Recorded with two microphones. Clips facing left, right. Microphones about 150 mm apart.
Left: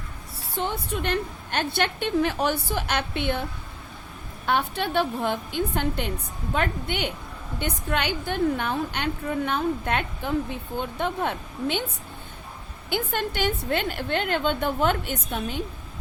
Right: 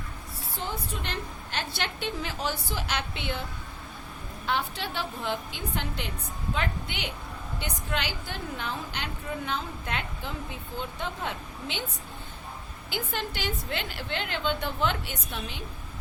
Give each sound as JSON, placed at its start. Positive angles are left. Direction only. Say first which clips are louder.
{"t": 0.6, "sound": "a woman's voice", "louder": "left 7 dB", "side_deg": 55}
{"t": 4.4, "sound": "a woman's voice", "louder": "left 6 dB", "side_deg": 55}
{"t": 12.9, "sound": "a woman's voice", "louder": "left 6 dB", "side_deg": 55}